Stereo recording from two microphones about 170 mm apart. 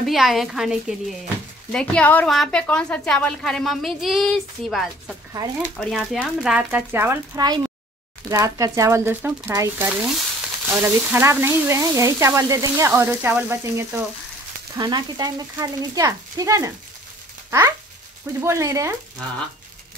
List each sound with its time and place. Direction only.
0.0 s a woman's voice: centre (ahead or behind)
14.8 s speech: 25° right (ahead or behind)